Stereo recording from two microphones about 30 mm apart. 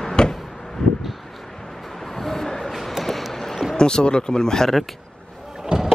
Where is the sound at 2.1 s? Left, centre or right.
Centre.